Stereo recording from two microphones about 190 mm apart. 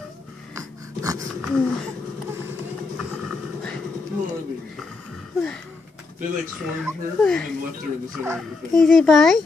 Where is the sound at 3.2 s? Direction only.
5° left (ahead or behind).